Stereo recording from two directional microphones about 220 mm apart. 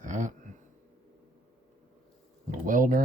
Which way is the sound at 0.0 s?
35° right (ahead or behind).